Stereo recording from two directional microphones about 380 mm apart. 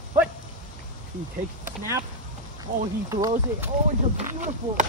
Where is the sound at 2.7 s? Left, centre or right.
Right.